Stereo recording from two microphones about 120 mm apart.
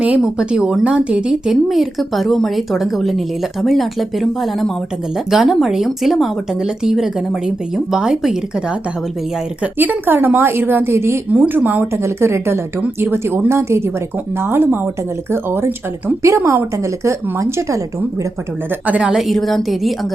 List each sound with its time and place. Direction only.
0.3 s a woman's voice: 5° right (ahead or behind)
9.7 s a woman's voice: 15° right (ahead or behind)
18.9 s speech: 10° right (ahead or behind)